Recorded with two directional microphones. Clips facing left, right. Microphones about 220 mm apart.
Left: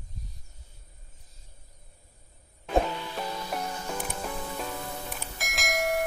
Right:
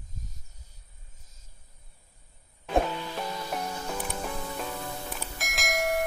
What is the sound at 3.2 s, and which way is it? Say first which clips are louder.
Music: even; 5° right (ahead or behind).